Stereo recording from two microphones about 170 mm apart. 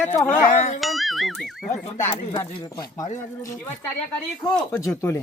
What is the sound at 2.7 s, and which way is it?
Speech, 20° left (ahead or behind).